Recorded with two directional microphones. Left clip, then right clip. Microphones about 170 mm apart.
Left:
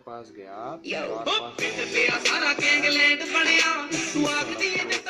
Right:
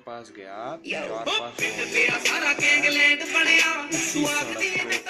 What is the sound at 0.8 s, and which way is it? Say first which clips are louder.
Music: left 1 dB; 20° left (ahead or behind).